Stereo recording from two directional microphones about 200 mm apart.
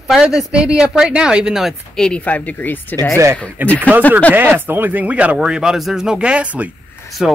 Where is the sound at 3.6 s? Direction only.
10° right (ahead or behind).